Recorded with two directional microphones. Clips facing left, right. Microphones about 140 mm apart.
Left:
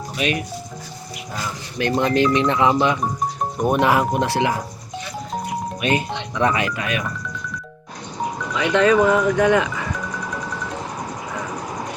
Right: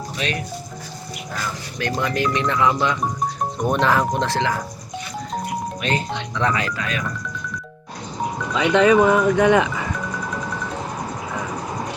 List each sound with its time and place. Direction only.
0.2 s speech: 10° left (ahead or behind)
1.8 s speech: 20° left (ahead or behind)
5.8 s speech: 15° left (ahead or behind)
8.5 s speech: 20° right (ahead or behind)